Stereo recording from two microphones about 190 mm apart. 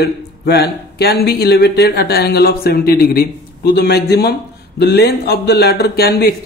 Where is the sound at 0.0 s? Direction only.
60° left (ahead or behind).